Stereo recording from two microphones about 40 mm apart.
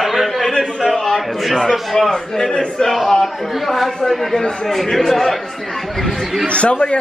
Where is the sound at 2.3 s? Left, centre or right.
Centre.